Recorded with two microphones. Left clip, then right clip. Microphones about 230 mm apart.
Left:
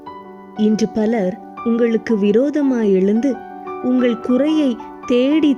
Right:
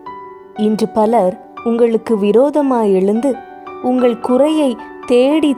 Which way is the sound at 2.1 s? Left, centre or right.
Right.